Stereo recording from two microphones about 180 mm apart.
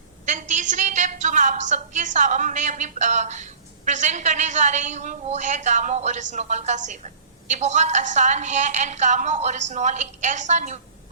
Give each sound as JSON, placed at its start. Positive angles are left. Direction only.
{"t": 0.3, "sound": "a woman's voice", "side_deg": -45}